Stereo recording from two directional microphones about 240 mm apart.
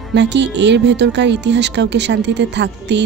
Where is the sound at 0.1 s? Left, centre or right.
Right.